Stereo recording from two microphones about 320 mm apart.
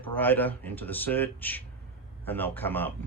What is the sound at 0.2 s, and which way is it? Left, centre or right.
Speech, centre.